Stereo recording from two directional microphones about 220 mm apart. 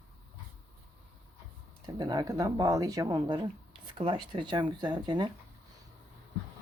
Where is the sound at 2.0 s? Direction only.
15° right (ahead or behind).